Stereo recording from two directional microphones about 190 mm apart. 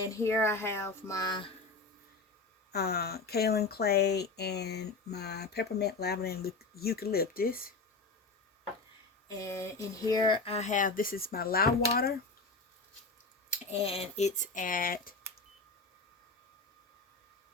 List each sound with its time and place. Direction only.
0.0 s speech: 15° left (ahead or behind)
2.7 s speech: 55° left (ahead or behind)
9.4 s speech: 15° left (ahead or behind); by 12.1 s 55° left (ahead or behind)
13.5 s speech: 30° left (ahead or behind); by 15.1 s 50° left (ahead or behind)